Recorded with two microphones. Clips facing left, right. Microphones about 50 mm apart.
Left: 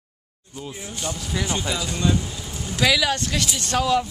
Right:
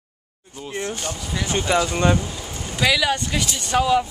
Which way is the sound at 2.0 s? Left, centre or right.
Right.